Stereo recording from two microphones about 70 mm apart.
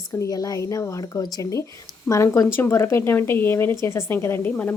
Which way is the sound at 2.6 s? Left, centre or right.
Left.